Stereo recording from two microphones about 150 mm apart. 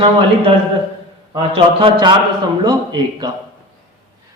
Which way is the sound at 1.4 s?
35° right (ahead or behind).